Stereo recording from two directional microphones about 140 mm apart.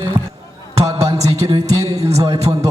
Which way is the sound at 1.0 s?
25° right (ahead or behind).